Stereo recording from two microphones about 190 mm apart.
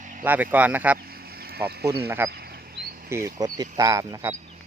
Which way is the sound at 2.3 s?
55° right (ahead or behind).